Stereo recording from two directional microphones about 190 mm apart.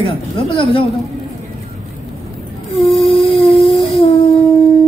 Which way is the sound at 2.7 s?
Centre (ahead or behind).